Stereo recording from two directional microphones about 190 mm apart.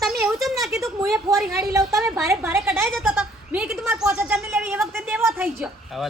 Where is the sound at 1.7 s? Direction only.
15° right (ahead or behind).